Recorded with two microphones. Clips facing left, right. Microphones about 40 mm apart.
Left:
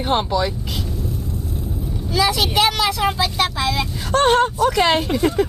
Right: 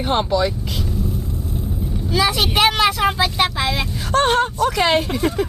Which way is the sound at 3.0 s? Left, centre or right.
Centre.